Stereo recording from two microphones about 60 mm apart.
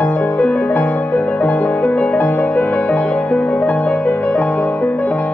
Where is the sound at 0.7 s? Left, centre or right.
Left; by 3.6 s centre.